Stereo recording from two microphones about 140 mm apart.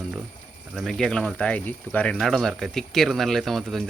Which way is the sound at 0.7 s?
Centre (ahead or behind).